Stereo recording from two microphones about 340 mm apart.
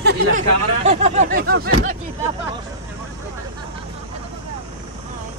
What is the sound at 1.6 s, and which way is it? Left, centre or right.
Speech, right.